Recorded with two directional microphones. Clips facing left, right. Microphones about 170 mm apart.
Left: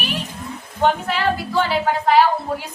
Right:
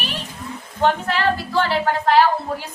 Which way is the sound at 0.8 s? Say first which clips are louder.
Even; 5° left (ahead or behind).